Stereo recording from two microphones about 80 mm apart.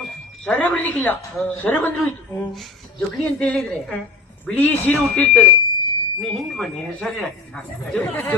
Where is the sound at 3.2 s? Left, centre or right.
Centre.